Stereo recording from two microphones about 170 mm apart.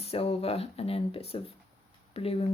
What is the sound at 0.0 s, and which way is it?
A woman's voice, 35° left (ahead or behind).